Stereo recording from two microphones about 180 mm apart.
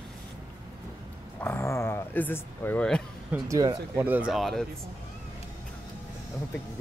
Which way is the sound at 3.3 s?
20° right (ahead or behind).